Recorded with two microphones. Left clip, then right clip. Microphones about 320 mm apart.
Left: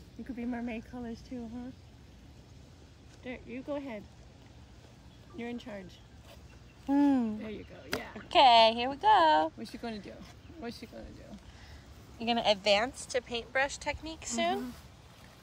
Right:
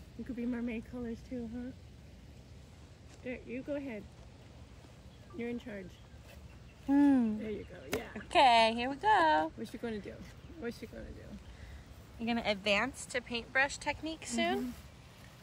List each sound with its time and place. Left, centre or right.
0.4 s speech: centre
3.3 s speech: centre
5.4 s speech: centre
6.9 s speech: centre
12.2 s speech: centre